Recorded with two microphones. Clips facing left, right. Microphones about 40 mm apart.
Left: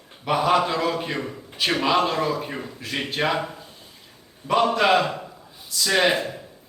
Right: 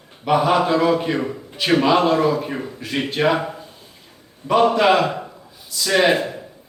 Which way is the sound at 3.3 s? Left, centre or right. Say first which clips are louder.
Right 5 dB; centre.